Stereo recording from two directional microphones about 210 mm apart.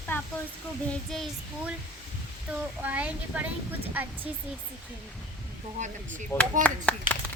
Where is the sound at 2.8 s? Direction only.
5° right (ahead or behind).